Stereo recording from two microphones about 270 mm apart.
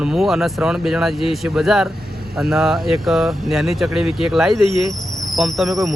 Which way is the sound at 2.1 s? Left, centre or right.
Right.